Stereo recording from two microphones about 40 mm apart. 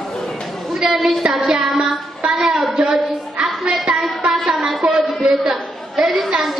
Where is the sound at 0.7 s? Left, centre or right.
Centre.